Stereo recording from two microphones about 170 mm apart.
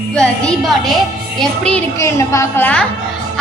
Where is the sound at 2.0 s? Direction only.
15° left (ahead or behind).